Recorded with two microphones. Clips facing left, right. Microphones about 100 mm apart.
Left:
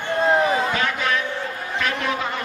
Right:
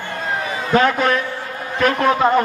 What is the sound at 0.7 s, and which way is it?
A man's voice, 45° right (ahead or behind).